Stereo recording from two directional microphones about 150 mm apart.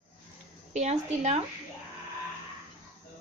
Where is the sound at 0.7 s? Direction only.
45° right (ahead or behind).